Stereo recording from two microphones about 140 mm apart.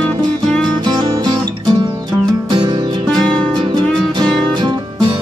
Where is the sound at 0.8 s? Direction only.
30° right (ahead or behind).